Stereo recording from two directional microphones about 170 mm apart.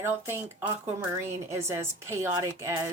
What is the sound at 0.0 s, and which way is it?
A woman's voice, 15° right (ahead or behind).